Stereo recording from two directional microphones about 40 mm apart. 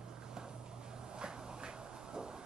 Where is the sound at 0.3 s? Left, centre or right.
Centre.